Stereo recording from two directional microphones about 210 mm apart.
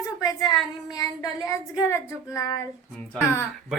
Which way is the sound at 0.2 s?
15° left (ahead or behind).